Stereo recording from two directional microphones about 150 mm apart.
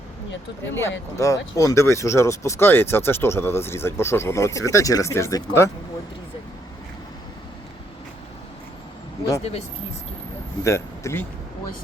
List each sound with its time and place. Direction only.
0.6 s speech: 15° left (ahead or behind)
9.4 s speech: 45° left (ahead or behind)
10.6 s speech: 20° left (ahead or behind)